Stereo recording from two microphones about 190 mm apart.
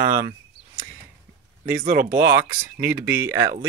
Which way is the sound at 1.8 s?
50° right (ahead or behind).